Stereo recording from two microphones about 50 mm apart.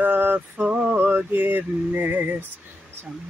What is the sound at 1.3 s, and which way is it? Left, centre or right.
Speech, right.